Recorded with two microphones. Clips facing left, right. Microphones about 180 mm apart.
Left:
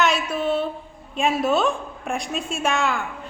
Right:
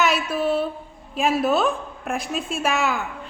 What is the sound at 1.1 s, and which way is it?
A woman's voice, centre (ahead or behind).